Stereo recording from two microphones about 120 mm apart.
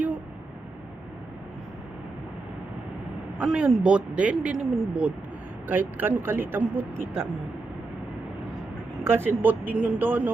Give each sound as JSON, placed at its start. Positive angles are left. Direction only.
{"t": 3.3, "sound": "a man's voice", "side_deg": -10}
{"t": 9.0, "sound": "a man's voice", "side_deg": -20}